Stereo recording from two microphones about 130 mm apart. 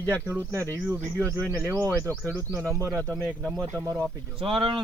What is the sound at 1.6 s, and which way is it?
Speech, 20° right (ahead or behind).